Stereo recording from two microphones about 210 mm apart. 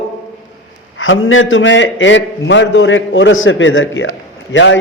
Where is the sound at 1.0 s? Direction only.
70° left (ahead or behind).